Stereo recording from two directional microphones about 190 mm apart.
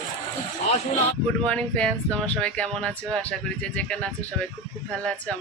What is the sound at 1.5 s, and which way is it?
Speech, 5° left (ahead or behind).